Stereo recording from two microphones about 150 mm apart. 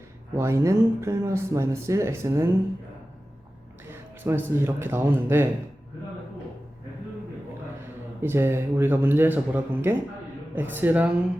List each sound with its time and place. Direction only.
0.3 s speech: 20° right (ahead or behind)
3.8 s speech: 15° right (ahead or behind)
8.2 s speech: 15° right (ahead or behind)